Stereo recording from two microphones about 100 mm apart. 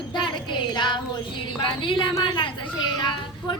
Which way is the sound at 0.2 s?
50° left (ahead or behind).